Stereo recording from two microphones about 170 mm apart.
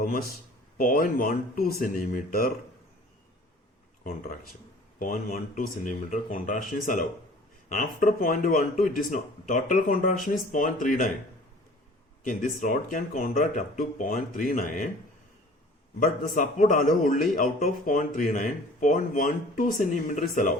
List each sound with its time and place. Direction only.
0.0 s speech: 60° left (ahead or behind)
4.0 s a man's voice: 55° left (ahead or behind)
12.2 s a man's voice: 55° left (ahead or behind)
16.0 s a man's voice: 50° left (ahead or behind)